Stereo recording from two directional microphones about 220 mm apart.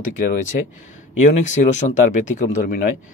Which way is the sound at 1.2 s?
35° left (ahead or behind).